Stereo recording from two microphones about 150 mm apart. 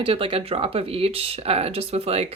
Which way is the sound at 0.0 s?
40° right (ahead or behind).